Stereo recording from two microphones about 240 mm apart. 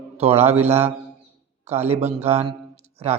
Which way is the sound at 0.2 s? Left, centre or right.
Right.